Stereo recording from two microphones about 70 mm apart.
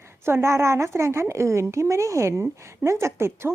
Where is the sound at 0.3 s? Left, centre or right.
Right.